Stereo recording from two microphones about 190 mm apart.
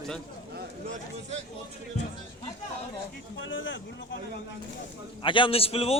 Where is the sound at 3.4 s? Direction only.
80° left.